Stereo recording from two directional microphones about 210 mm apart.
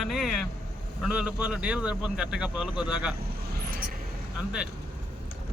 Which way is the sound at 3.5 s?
45° right (ahead or behind).